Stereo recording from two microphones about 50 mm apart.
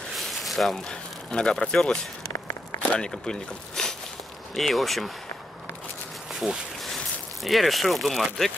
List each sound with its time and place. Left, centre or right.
0.2 s a sound: centre
0.8 s speech: centre
2.3 s a sound: left
3.0 s speech: centre
4.6 s speech: centre
7.4 s speech: centre